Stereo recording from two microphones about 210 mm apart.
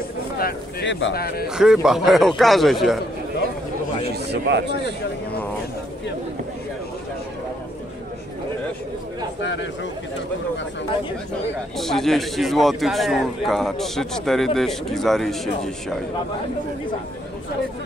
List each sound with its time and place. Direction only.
0.4 s speech: 45° left (ahead or behind); by 1.1 s 60° left (ahead or behind)
1.1 s speech: 45° left (ahead or behind)
1.5 s a man's voice: 5° right (ahead or behind)
4.1 s a man's voice: 55° right (ahead or behind)
9.4 s a man's voice: 60° left (ahead or behind)
11.7 s a man's voice: centre (ahead or behind)